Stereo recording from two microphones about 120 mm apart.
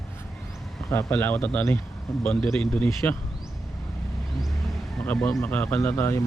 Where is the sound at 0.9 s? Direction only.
20° left (ahead or behind).